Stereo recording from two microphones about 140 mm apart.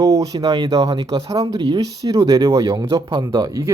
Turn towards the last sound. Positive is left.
turn(degrees=-25)  # may be behind; listen again after turning